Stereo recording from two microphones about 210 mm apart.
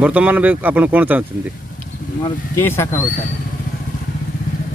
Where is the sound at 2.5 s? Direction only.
10° left (ahead or behind).